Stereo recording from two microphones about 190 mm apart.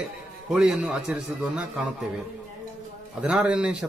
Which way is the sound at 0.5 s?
Centre (ahead or behind).